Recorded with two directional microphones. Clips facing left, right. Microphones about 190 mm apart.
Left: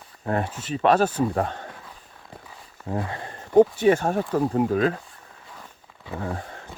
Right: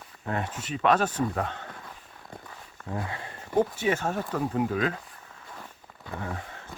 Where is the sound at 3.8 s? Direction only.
50° left (ahead or behind).